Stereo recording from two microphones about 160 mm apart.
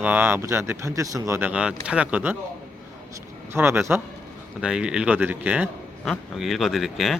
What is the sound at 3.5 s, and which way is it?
A man's voice, 15° right (ahead or behind).